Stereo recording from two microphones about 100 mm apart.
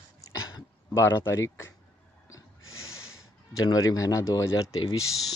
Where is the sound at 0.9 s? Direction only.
25° left (ahead or behind).